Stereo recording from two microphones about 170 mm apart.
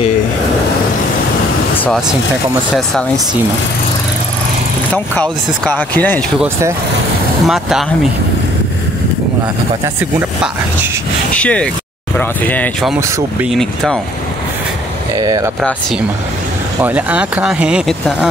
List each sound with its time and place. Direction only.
2.7 s speech: centre (ahead or behind)
4.9 s speech: 10° left (ahead or behind)
7.4 s speech: centre (ahead or behind)
11.3 s speech: 5° left (ahead or behind)
15.1 s speech: 20° right (ahead or behind)
16.8 s speech: 10° right (ahead or behind)